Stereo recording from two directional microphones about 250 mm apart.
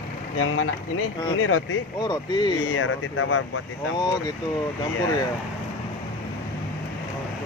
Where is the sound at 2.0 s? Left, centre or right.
Centre.